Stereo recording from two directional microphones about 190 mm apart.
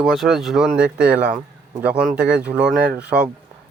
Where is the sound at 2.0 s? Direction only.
55° right (ahead or behind).